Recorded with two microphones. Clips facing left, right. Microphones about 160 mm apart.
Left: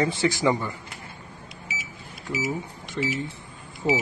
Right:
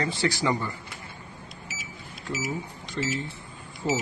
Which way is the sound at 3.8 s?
15° left (ahead or behind).